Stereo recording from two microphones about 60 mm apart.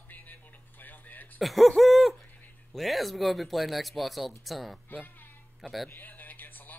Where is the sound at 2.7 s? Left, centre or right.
Centre.